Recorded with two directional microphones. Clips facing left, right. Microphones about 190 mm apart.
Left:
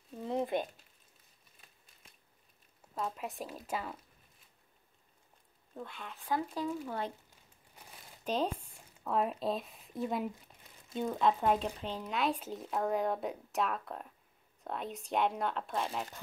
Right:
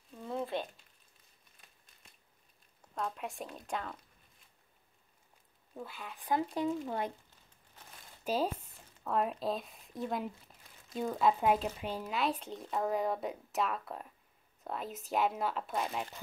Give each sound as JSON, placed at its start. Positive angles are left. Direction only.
{"t": 0.2, "sound": "a sound", "side_deg": 20}
{"t": 2.9, "sound": "speech", "side_deg": 5}
{"t": 5.8, "sound": "speech", "side_deg": -5}
{"t": 6.2, "sound": "speech", "side_deg": -20}
{"t": 7.7, "sound": "crumpling", "side_deg": 10}
{"t": 8.2, "sound": "speech", "side_deg": -5}